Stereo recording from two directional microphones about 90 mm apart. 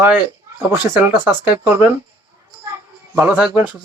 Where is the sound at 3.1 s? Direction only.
25° right (ahead or behind).